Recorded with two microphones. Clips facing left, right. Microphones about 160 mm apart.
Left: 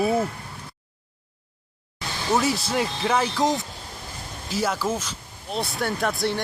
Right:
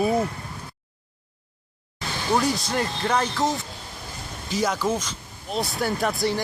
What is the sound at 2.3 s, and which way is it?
Speech, 5° left (ahead or behind).